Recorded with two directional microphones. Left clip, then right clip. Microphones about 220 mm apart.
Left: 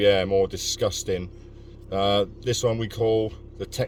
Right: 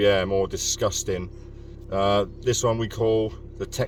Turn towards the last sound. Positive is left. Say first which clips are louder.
# right 1 dB
turn(degrees=20)  # may be behind; listen again after turning